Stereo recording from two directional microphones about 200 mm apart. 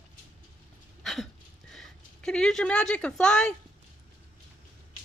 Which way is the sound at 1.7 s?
Centre (ahead or behind).